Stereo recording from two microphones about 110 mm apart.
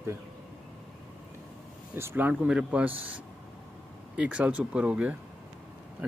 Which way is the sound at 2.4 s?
10° right (ahead or behind).